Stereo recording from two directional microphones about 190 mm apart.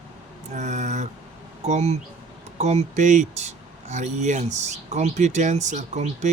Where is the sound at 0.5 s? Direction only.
40° right (ahead or behind).